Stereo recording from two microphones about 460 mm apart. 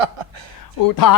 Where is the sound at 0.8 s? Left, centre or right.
Left.